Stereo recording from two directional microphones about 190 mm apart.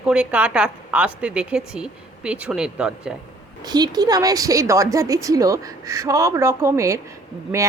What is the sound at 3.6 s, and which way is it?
A woman's voice, 20° right (ahead or behind).